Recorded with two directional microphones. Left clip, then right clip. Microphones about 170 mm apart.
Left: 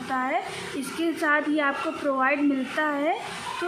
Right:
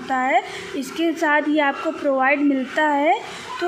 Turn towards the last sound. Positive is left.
turn(degrees=-30)  # may be behind; listen again after turning